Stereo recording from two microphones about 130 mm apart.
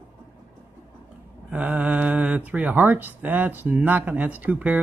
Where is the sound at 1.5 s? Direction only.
10° right (ahead or behind).